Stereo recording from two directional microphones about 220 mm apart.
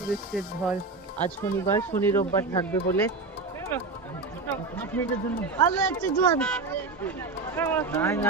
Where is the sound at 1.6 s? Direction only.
10° left (ahead or behind).